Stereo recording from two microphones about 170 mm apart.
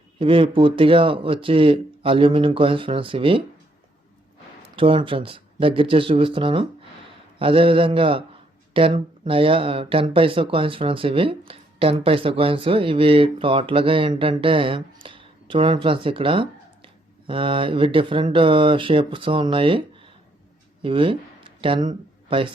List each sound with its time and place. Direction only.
0.2 s speech: 30° right (ahead or behind)
4.6 s speech: 30° right (ahead or behind)